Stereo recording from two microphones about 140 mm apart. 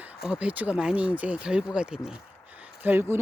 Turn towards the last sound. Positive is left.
turn(degrees=-15)  # may be behind; listen again after turning